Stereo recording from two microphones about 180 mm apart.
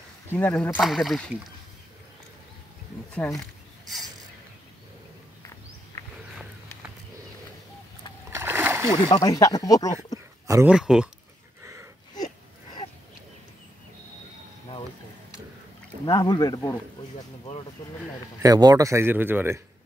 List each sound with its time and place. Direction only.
0.3 s speech: 10° left (ahead or behind)
0.7 s speech: centre (ahead or behind)
3.2 s speech: 10° left (ahead or behind)
5.9 s wild animals: 15° left (ahead or behind)
8.3 s splash: 15° right (ahead or behind)
9.1 s speech: 20° left (ahead or behind)
10.4 s speech: 15° right (ahead or behind)
10.7 s speech: 5° right (ahead or behind)
11.6 s a sound: 15° right (ahead or behind)
16.1 s speech: 20° left (ahead or behind)
18.4 s speech: 20° right (ahead or behind)